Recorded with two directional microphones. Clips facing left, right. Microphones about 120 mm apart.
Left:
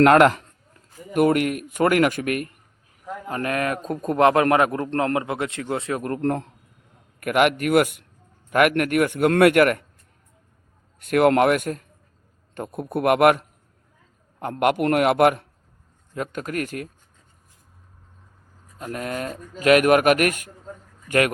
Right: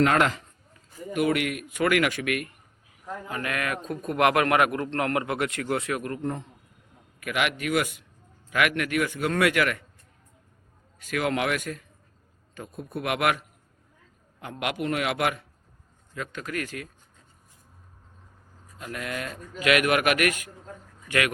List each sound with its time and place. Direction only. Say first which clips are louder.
0.0 s a man's voice: left 8 dB; 55° left (ahead or behind); by 6.0 s 25° left (ahead or behind)
6.2 s a man's voice: left 7 dB; 80° left
7.2 s a man's voice: left 9 dB; 50° left (ahead or behind)
11.0 s a man's voice: left 10 dB; 55° left (ahead or behind)
12.5 s a man's voice: left 8 dB; 60° left (ahead or behind)
14.6 s a man's voice: left 9 dB; 55° left (ahead or behind)
18.8 s a man's voice: left 5 dB; 40° left (ahead or behind)